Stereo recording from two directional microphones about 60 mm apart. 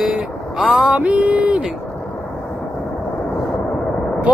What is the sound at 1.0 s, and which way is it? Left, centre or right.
Speech, right.